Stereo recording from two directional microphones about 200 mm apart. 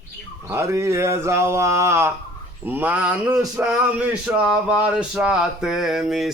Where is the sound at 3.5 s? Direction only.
5° right (ahead or behind).